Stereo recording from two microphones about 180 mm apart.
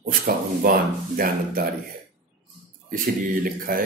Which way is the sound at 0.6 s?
55° right (ahead or behind).